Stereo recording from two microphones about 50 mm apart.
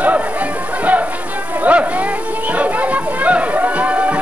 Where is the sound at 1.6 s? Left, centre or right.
Right.